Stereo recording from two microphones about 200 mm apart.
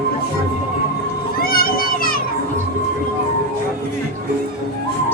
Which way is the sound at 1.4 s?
45° left (ahead or behind).